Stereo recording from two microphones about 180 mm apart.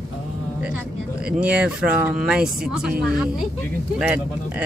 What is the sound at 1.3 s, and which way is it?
Speech, 5° right (ahead or behind).